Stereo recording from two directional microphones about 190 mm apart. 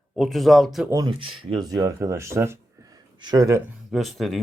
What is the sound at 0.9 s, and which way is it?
Speech, 20° right (ahead or behind).